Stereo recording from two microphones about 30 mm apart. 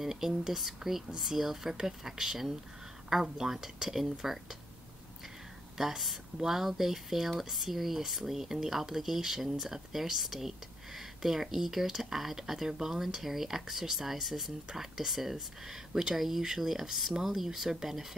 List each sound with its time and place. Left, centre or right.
0.0 s speech: centre
5.8 s speech: centre